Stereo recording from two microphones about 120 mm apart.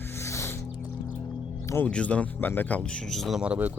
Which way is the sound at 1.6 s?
20° left (ahead or behind).